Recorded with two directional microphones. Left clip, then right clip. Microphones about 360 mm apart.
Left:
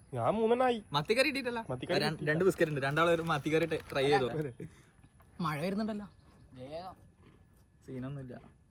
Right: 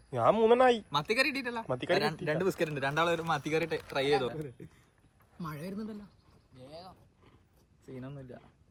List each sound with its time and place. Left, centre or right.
0.1 s a man's voice: right
0.9 s a man's voice: centre
1.6 s a man's voice: right
1.9 s a man's voice: centre
4.4 s a man's voice: centre
5.5 s a man's voice: centre
6.6 s speech: left
7.9 s a man's voice: centre